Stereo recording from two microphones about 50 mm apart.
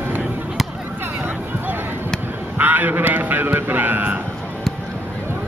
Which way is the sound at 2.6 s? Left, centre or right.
Right.